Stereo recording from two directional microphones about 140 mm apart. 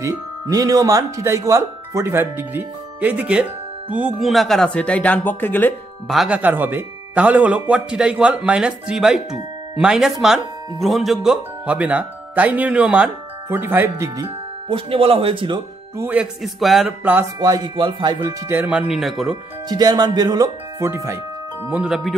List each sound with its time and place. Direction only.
0.0 s speech: 25° right (ahead or behind); by 5.8 s 15° left (ahead or behind)
6.0 s speech: 5° right (ahead or behind); by 14.3 s 20° right (ahead or behind)
14.7 s speech: 40° right (ahead or behind)
16.0 s speech: 10° right (ahead or behind)
16.5 s speech: centre (ahead or behind)
17.0 s speech: 15° right (ahead or behind)
17.4 s speech: 30° right (ahead or behind)
18.7 s speech: 5° right (ahead or behind)
19.7 s speech: 30° right (ahead or behind)
21.6 s speech: 5° right (ahead or behind)